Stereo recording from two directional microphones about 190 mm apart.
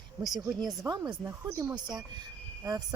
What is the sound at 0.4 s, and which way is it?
Speech, centre (ahead or behind).